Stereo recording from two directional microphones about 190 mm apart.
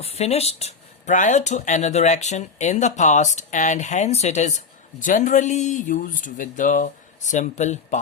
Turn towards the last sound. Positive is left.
turn(degrees=40)  # may be behind; listen again after turning